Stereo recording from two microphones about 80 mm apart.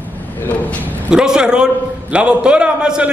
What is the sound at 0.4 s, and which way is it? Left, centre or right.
Speech, centre.